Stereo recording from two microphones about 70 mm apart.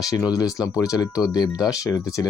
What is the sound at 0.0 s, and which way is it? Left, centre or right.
Speech, left.